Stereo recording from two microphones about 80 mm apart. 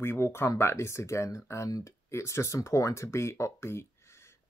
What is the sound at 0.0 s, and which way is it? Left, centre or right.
Speech, left.